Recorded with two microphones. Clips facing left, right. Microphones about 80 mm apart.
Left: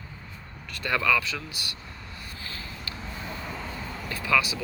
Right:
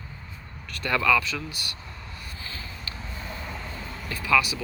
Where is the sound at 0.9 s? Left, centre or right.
Left.